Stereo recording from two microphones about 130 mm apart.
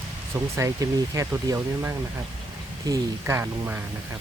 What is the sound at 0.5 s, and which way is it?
Speech, 25° right (ahead or behind).